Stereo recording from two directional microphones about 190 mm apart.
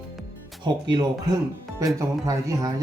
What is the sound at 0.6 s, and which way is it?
Speech, 25° right (ahead or behind).